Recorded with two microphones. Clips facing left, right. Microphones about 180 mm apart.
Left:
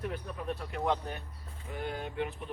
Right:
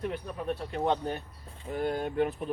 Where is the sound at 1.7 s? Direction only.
40° right (ahead or behind).